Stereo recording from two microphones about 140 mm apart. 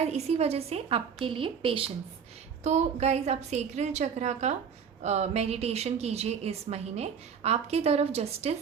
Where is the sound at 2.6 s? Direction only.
50° right (ahead or behind).